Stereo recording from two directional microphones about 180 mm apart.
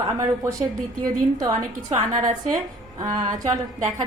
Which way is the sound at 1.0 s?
20° right (ahead or behind).